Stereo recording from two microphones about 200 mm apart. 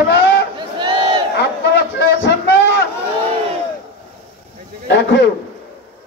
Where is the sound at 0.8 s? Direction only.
25° right (ahead or behind).